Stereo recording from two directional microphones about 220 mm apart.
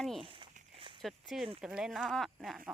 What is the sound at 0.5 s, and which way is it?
Walk, 25° right (ahead or behind).